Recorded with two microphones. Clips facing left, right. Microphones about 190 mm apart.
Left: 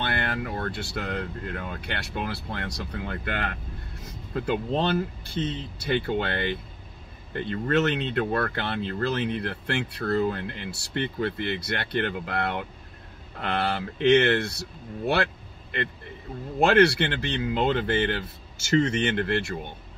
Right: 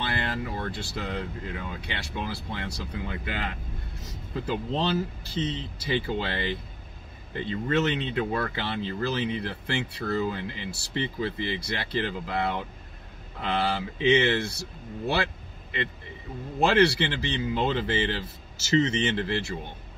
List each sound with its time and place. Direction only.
0.0 s speech: 60° left (ahead or behind)
16.6 s speech: 55° left (ahead or behind)